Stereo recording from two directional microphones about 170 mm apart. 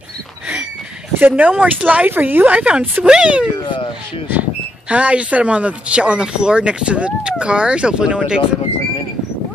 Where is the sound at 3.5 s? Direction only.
30° left (ahead or behind).